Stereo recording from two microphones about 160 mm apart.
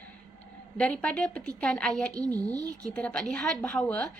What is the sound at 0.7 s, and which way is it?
A woman's voice, 5° left (ahead or behind).